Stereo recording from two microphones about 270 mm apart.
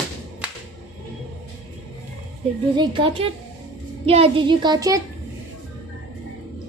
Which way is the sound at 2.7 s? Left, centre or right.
Centre.